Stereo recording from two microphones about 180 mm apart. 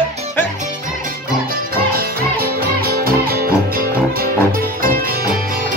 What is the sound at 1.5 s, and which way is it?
Music, 55° right (ahead or behind).